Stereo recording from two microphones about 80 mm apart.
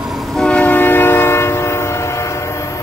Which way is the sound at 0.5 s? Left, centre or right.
Centre.